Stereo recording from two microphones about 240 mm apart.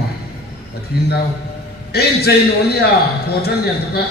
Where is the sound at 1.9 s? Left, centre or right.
Left.